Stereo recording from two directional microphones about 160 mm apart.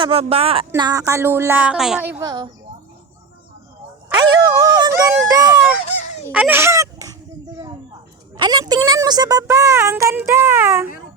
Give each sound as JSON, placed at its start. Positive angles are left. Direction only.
{"t": 0.0, "sound": "speech", "side_deg": -35}
{"t": 0.8, "sound": "speech", "side_deg": -20}
{"t": 2.2, "sound": "speech", "side_deg": -25}
{"t": 4.1, "sound": "speech", "side_deg": -25}
{"t": 6.3, "sound": "a sound", "side_deg": -10}
{"t": 8.4, "sound": "speech", "side_deg": -25}